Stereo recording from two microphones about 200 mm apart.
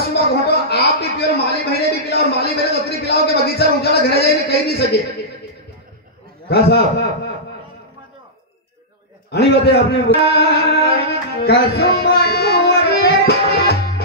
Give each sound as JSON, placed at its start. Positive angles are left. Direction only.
{"t": 0.1, "sound": "a sound", "side_deg": 55}
{"t": 6.5, "sound": "a man's voice", "side_deg": 50}
{"t": 9.3, "sound": "a man's voice", "side_deg": 55}
{"t": 11.4, "sound": "music", "side_deg": 55}